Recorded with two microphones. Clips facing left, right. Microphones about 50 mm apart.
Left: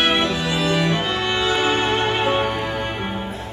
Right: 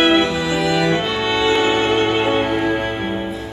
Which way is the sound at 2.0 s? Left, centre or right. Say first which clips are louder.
Right 3 dB; centre.